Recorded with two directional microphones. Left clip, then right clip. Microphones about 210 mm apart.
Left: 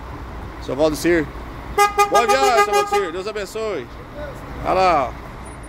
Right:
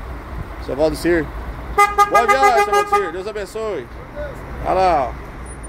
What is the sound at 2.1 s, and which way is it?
Speech, 5° left (ahead or behind).